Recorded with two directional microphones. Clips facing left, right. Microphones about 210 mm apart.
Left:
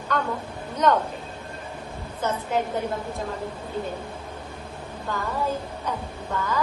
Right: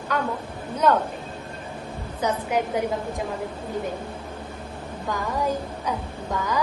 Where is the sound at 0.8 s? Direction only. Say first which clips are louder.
Right 1 dB; 5° right (ahead or behind).